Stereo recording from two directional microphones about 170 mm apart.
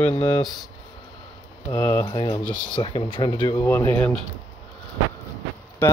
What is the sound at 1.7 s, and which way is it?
Speech, 15° left (ahead or behind).